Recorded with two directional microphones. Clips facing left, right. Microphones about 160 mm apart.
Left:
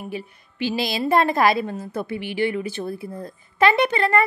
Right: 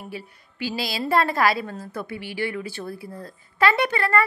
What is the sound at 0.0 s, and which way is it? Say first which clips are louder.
A woman's voice: left 5 dB; 20° left (ahead or behind).